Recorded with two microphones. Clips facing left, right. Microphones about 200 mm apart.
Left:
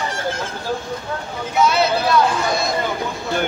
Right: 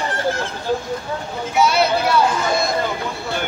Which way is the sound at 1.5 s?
10° right (ahead or behind).